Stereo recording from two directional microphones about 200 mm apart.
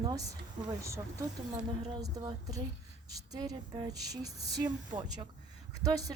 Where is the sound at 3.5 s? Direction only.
20° right (ahead or behind).